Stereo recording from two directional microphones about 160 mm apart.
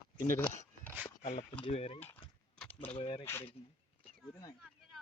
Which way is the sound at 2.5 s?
10° left (ahead or behind).